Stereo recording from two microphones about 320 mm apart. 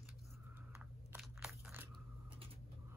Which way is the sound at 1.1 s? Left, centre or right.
Centre.